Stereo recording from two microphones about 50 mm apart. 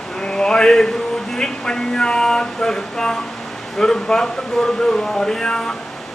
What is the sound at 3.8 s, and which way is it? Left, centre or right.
Speech, centre.